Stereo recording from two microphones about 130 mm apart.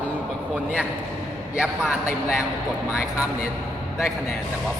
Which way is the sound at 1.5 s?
5° right (ahead or behind).